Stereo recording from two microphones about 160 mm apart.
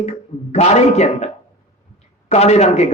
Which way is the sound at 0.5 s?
45° left (ahead or behind).